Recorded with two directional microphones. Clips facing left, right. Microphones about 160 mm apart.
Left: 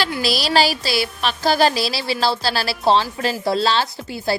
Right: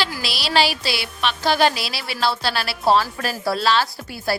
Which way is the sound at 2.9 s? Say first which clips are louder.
Left 1 dB; 25° left (ahead or behind).